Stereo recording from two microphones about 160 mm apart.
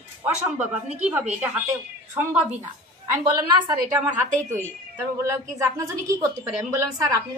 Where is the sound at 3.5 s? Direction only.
25° right (ahead or behind).